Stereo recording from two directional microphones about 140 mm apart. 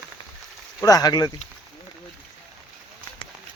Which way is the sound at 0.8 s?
25° left (ahead or behind).